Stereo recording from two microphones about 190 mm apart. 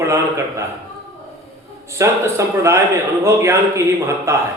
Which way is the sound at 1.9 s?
15° right (ahead or behind).